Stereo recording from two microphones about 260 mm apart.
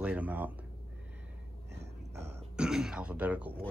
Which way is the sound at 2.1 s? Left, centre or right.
Centre.